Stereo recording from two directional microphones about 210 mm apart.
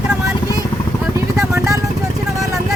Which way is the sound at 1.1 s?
15° right (ahead or behind).